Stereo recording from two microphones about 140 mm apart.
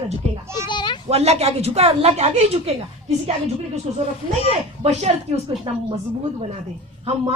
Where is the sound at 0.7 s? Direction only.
35° left (ahead or behind).